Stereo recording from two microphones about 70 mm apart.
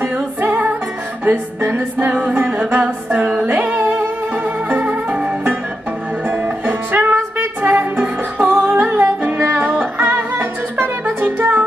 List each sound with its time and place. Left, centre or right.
0.0 s music: right